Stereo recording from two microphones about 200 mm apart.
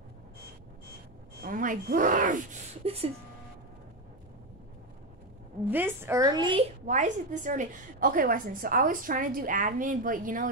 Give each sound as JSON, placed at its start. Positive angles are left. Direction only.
{"t": 1.4, "sound": "speech", "side_deg": -40}
{"t": 5.7, "sound": "a woman's voice", "side_deg": -10}
{"t": 6.9, "sound": "a woman's voice", "side_deg": -40}